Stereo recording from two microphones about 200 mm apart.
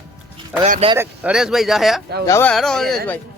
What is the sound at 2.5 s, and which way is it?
Speech, centre (ahead or behind).